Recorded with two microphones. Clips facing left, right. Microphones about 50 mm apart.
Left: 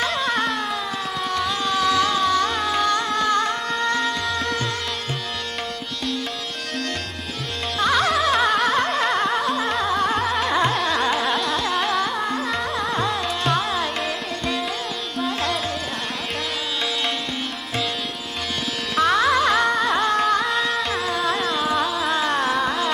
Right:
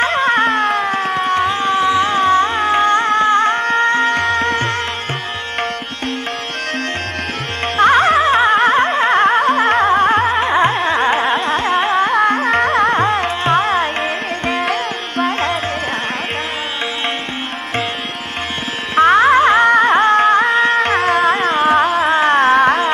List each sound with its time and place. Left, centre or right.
0.0 s a sound: right
7.7 s music: right
12.1 s carnatic music: right
18.9 s music: right